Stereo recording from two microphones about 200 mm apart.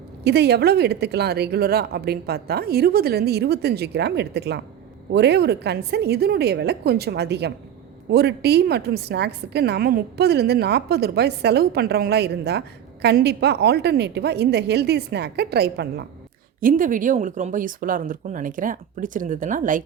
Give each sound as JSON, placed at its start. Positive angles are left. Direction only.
{"t": 0.3, "sound": "a woman's voice", "side_deg": -55}
{"t": 16.6, "sound": "speech", "side_deg": -45}